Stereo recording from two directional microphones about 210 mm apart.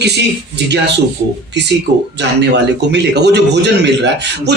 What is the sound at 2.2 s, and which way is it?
A man's voice, 55° right (ahead or behind).